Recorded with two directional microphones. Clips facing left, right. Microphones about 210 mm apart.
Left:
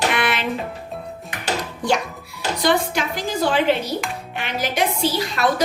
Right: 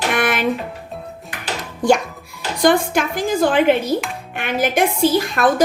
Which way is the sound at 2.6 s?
50° right (ahead or behind).